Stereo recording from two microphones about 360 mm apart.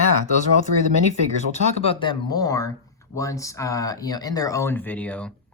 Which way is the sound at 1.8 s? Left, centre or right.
Centre.